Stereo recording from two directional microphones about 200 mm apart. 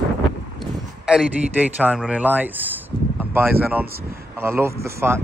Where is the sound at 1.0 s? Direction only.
5° right (ahead or behind).